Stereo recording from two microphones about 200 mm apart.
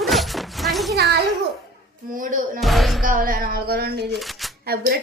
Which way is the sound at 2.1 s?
45° right (ahead or behind).